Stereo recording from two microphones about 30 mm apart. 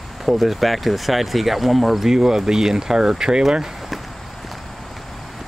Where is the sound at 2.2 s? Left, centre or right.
Centre.